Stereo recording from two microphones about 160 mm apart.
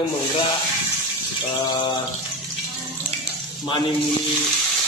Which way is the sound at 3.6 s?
30° left (ahead or behind).